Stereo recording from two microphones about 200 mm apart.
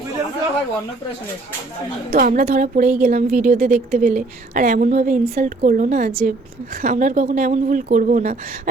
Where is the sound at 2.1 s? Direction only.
45° right (ahead or behind).